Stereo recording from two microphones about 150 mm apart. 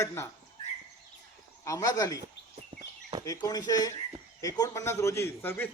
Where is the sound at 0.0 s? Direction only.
15° left (ahead or behind).